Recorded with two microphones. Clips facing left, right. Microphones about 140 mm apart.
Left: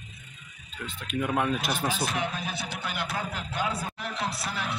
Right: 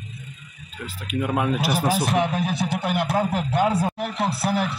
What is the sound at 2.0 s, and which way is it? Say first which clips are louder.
Speech: right 8 dB; 75° right (ahead or behind).